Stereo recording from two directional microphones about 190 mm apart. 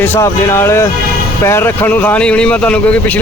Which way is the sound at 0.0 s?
10° left (ahead or behind).